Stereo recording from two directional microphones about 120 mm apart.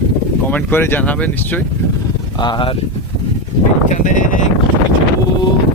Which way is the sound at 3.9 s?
90° left.